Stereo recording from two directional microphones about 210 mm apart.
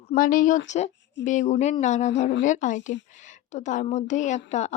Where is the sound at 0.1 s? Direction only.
40° left (ahead or behind).